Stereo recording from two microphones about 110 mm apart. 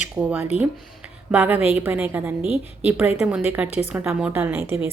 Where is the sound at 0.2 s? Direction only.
15° right (ahead or behind).